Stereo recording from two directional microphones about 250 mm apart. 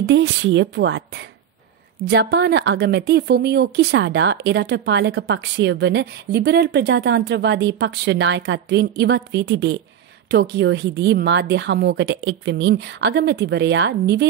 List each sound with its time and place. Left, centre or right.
0.0 s a woman's voice: right